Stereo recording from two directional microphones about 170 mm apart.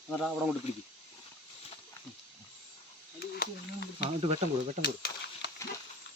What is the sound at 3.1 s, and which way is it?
Snake, 70° left (ahead or behind).